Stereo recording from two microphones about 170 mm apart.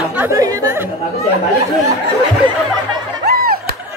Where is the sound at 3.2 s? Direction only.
60° right (ahead or behind).